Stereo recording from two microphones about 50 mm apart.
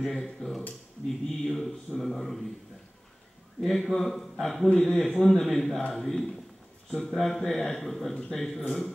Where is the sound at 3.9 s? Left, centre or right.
Centre.